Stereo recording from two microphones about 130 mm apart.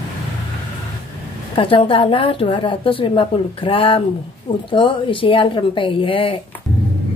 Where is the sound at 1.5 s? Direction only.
45° left (ahead or behind).